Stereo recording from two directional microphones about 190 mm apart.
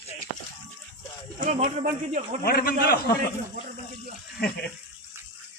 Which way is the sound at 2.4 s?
55° left (ahead or behind).